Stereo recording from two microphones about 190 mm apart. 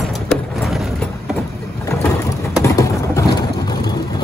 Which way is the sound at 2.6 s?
15° left (ahead or behind).